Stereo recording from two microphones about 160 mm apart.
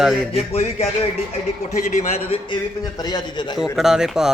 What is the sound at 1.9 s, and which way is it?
Speech, 40° left (ahead or behind).